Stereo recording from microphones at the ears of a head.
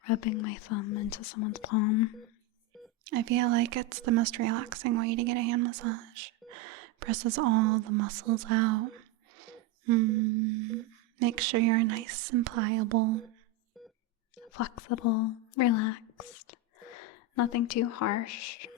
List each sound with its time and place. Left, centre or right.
0.0 s speech: left
3.0 s speech: right
14.5 s speech: left